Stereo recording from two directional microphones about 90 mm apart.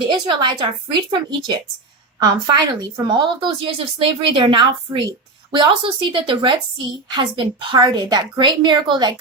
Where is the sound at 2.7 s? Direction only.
50° right (ahead or behind).